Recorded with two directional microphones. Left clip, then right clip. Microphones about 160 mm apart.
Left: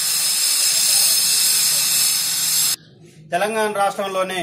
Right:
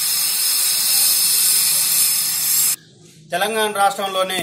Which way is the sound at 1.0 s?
Centre (ahead or behind).